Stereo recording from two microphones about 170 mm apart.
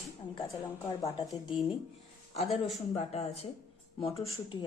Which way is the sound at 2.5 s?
Centre (ahead or behind).